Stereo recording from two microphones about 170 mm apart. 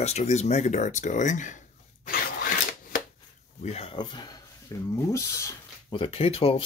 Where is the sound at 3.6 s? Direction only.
35° left (ahead or behind); by 4.9 s 20° left (ahead or behind).